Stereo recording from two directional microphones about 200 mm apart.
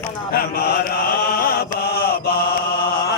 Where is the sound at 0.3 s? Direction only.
50° left (ahead or behind).